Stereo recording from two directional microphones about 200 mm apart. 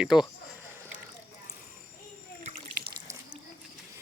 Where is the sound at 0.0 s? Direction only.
5° right (ahead or behind).